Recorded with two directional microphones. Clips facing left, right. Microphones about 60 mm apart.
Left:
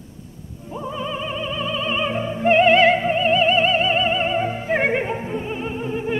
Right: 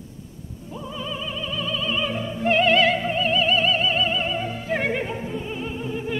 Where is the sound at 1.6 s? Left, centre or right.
Left.